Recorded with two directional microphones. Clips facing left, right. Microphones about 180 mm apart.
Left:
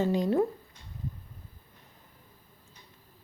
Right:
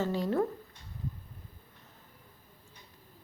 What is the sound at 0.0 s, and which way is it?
Speech, 15° left (ahead or behind).